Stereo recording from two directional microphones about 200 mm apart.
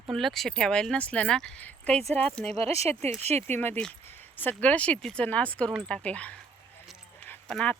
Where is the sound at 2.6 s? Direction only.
30° right (ahead or behind).